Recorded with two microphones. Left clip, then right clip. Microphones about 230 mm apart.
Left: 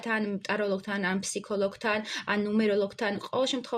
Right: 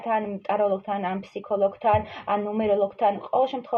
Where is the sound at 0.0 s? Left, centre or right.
Left.